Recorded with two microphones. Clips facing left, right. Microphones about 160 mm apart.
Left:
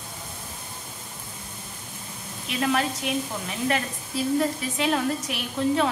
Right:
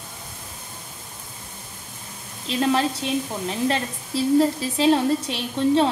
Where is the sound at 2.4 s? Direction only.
30° right (ahead or behind).